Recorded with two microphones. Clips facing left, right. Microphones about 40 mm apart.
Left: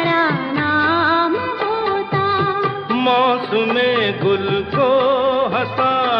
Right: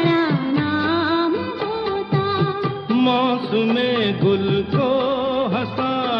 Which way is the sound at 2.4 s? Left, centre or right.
Left.